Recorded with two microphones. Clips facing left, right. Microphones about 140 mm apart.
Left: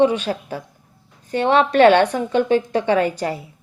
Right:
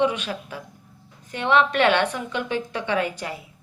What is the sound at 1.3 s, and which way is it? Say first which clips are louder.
Speech: left 4 dB; 35° left (ahead or behind).